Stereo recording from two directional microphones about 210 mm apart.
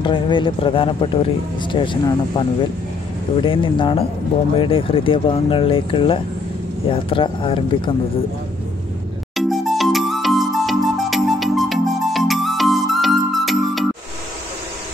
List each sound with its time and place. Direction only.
0.0 s speech: 25° left (ahead or behind)
3.4 s speech: 25° left (ahead or behind)
9.3 s music: centre (ahead or behind)